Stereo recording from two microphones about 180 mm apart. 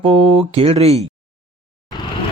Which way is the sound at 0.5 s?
35° right (ahead or behind).